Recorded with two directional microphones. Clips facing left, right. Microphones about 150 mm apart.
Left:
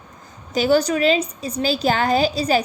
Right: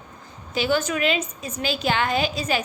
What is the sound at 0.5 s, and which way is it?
A woman's voice, 40° left (ahead or behind).